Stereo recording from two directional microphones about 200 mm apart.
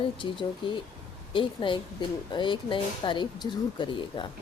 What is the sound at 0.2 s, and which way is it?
Speech, 25° left (ahead or behind).